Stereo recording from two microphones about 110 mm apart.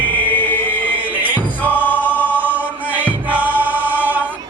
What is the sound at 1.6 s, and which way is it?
Choir, 15° left (ahead or behind).